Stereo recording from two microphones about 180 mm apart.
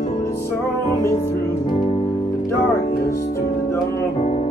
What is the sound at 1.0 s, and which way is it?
Music, 15° left (ahead or behind).